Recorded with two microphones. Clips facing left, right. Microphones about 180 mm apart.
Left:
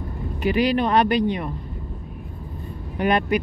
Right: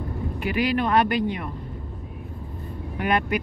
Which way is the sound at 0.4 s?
30° left (ahead or behind).